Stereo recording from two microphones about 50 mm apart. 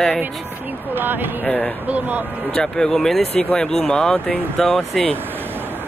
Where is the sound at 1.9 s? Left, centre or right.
Right.